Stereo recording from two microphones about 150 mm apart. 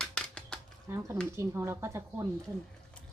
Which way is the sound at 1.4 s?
20° right (ahead or behind).